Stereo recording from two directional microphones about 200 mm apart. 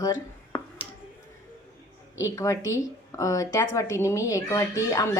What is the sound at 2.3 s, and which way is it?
Speech, 15° left (ahead or behind).